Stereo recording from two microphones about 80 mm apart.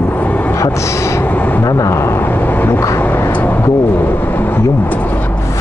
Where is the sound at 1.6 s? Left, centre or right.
Left.